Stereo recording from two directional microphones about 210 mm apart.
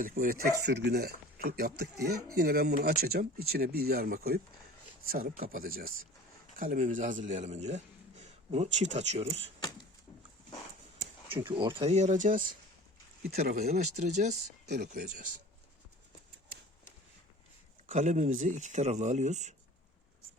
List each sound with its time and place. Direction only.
0.0 s a man's voice: 40° right (ahead or behind)
9.6 s a sound: 20° left (ahead or behind)
11.3 s speech: 25° right (ahead or behind); by 13.8 s 45° right (ahead or behind)
13.9 s speech: 35° right (ahead or behind)
17.8 s speech: 35° right (ahead or behind)